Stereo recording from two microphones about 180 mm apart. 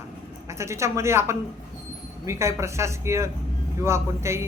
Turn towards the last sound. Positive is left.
turn(degrees=-15)  # may be behind; listen again after turning